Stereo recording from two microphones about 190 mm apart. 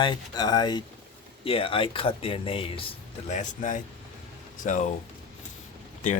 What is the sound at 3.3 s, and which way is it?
Speech, 40° left (ahead or behind).